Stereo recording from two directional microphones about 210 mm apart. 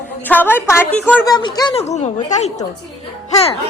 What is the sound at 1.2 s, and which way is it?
Speech, 20° left (ahead or behind).